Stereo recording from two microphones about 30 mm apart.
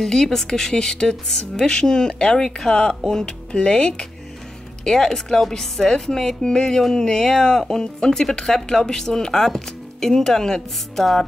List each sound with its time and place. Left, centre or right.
0.0 s speech: centre
4.8 s speech: centre
11.0 s speech: centre